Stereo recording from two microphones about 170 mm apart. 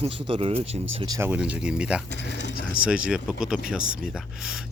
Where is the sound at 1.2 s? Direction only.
10° right (ahead or behind).